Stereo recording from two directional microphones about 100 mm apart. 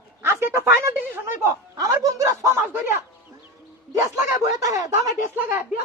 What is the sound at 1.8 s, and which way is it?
Speech, 35° right (ahead or behind).